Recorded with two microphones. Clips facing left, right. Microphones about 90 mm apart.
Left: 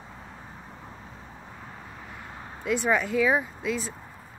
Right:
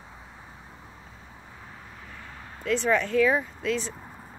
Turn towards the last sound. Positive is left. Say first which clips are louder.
# right 1 dB
turn(degrees=5)  # may be behind; listen again after turning